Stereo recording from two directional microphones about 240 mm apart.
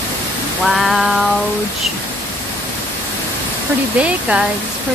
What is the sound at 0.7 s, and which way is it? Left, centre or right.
Female singing, centre.